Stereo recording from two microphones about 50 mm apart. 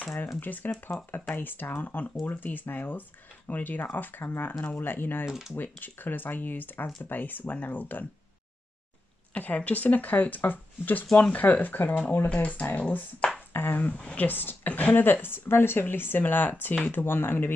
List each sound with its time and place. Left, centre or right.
0.4 s speech: left
9.3 s a woman's voice: left
12.3 s speech: left
13.5 s speech: left
13.9 s speech: left
14.2 s speech: left
17.0 s speech: left